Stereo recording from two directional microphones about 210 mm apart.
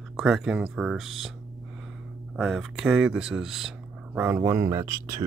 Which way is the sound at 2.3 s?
Centre (ahead or behind).